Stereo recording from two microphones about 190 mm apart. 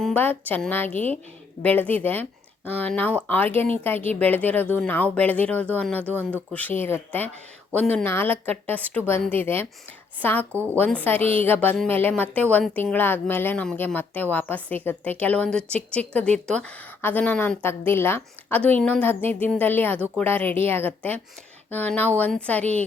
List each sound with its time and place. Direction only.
0.0 s a woman's voice: 10° left (ahead or behind)
11.2 s speech: 30° right (ahead or behind)
11.4 s a woman's voice: 10° left (ahead or behind)